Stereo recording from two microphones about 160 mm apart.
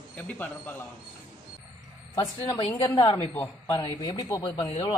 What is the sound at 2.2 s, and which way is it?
A woman's voice, 30° left (ahead or behind).